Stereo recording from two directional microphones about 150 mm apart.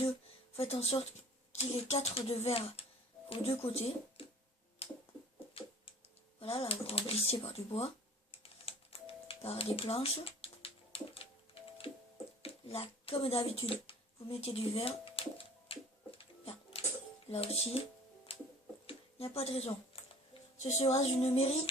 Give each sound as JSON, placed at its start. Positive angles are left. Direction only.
{"t": 0.5, "sound": "child singing", "side_deg": 45}
{"t": 1.5, "sound": "speech", "side_deg": 45}
{"t": 4.8, "sound": "finger snapping", "side_deg": 40}
{"t": 6.4, "sound": "speech", "side_deg": 40}
{"t": 7.3, "sound": "child singing", "side_deg": 40}
{"t": 8.3, "sound": "typing", "side_deg": 40}
{"t": 12.4, "sound": "a sound", "side_deg": 40}
{"t": 17.2, "sound": "child singing", "side_deg": 45}
{"t": 18.9, "sound": "a sound", "side_deg": 40}
{"t": 20.8, "sound": "child singing", "side_deg": 45}